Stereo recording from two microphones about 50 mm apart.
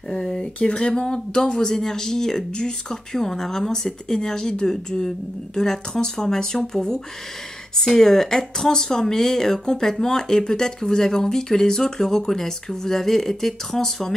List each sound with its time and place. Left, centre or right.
0.2 s speech: centre